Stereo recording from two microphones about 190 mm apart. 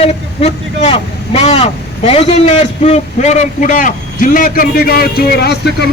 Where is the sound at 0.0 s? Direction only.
30° left (ahead or behind).